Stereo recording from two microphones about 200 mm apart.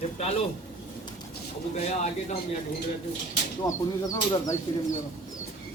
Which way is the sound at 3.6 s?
15° left (ahead or behind).